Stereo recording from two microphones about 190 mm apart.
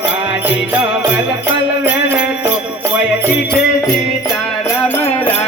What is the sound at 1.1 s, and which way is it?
Jingle bell, 10° right (ahead or behind).